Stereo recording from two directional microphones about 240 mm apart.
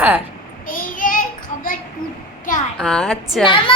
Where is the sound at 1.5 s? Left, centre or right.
Left.